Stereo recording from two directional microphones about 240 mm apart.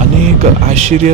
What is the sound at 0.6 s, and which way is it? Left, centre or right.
Speech, right.